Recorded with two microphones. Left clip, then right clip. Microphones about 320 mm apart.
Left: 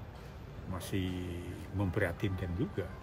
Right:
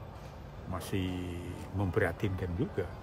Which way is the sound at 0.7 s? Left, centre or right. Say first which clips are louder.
Right 2 dB; centre.